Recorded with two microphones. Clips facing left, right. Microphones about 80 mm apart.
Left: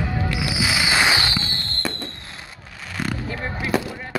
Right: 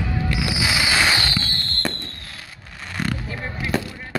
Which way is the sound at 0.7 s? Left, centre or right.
Centre.